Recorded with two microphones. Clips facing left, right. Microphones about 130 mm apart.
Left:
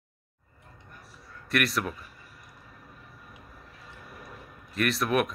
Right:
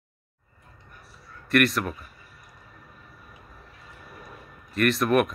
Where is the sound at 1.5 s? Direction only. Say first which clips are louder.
Right 5 dB; centre (ahead or behind).